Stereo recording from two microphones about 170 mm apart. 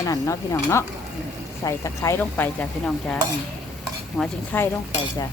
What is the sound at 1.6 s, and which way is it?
Stir, 20° left (ahead or behind).